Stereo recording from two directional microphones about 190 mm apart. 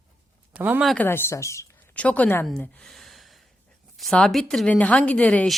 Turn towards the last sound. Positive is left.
turn(degrees=5)  # may be behind; listen again after turning